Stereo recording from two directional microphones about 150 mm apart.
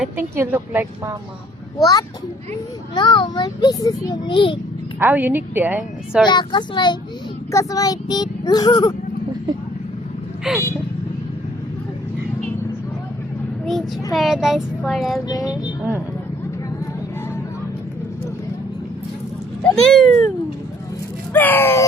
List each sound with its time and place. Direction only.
0.0 s speech: 10° right (ahead or behind)
1.8 s a child's voice: 25° left (ahead or behind)
4.9 s speech: 10° right (ahead or behind)
6.2 s a child's voice: 30° left (ahead or behind)
10.5 s a child's voice: 5° right (ahead or behind)
13.7 s a child's voice: centre (ahead or behind)
19.7 s a child's voice: centre (ahead or behind)
21.3 s a sound: 15° left (ahead or behind)